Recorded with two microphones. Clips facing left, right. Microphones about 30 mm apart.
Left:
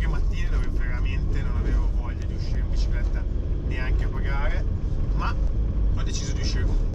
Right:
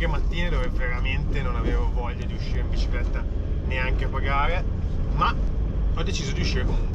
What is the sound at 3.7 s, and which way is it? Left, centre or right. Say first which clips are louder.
Speech: right 7 dB; right.